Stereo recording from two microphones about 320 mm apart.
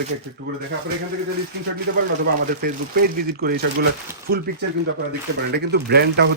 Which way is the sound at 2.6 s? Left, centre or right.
Right.